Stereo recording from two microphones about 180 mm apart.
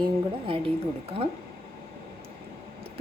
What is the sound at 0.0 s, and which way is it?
A woman's voice, 30° right (ahead or behind).